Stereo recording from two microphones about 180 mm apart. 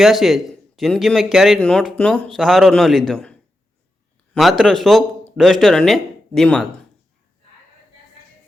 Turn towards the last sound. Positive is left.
turn(degrees=5)  # may be behind; listen again after turning